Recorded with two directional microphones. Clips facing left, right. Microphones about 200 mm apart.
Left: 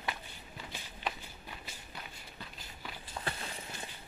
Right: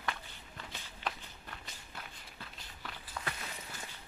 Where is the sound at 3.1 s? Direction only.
30° left (ahead or behind).